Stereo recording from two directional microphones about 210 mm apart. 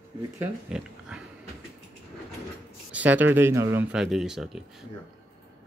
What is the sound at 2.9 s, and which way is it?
Speech, 10° right (ahead or behind).